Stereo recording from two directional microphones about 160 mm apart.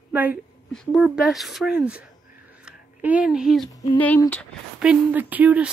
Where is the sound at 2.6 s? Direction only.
10° right (ahead or behind).